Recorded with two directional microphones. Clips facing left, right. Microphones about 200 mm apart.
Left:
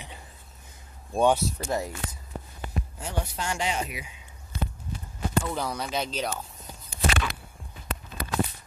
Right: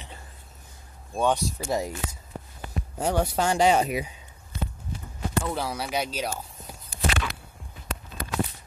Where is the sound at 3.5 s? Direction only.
35° right (ahead or behind).